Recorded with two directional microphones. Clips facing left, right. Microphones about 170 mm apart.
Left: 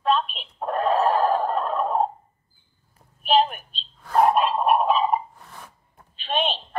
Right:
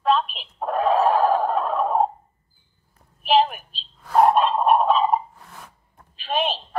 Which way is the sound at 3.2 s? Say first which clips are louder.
Right 1 dB; centre (ahead or behind).